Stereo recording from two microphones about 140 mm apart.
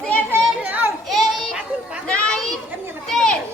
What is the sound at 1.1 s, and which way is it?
Children playing, centre (ahead or behind).